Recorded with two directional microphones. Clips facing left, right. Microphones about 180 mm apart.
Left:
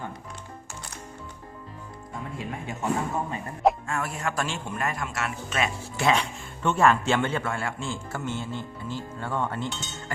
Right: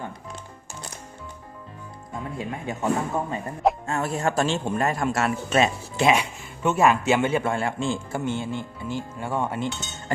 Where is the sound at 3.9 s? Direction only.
25° right (ahead or behind).